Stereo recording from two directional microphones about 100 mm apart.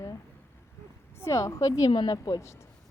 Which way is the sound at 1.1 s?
30° left (ahead or behind).